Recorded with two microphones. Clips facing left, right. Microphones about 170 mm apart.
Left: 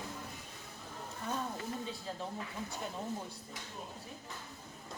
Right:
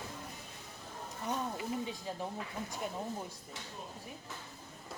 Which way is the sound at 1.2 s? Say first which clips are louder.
Right 2 dB; 15° right (ahead or behind).